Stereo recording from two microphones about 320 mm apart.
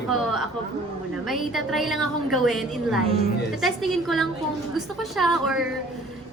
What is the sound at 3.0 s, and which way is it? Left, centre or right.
Speech, centre.